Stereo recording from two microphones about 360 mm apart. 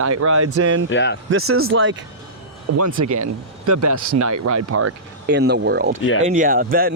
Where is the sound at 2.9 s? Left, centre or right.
Right.